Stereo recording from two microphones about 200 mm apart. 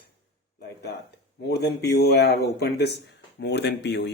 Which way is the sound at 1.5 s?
55° left (ahead or behind).